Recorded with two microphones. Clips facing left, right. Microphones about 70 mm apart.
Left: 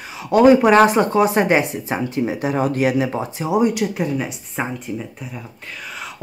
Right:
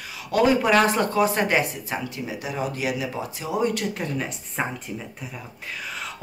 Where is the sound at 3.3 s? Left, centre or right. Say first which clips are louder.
Left 3 dB; left.